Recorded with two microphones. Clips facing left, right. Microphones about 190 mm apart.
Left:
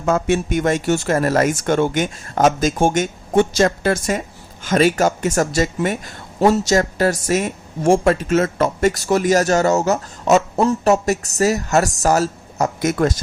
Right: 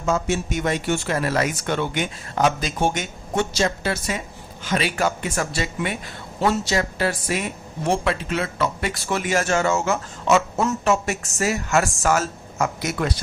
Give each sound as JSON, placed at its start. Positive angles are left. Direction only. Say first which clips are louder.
{"t": 0.0, "sound": "speech", "louder": "left 5 dB", "side_deg": 60}